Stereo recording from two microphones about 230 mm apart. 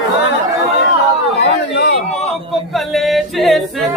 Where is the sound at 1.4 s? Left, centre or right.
Left.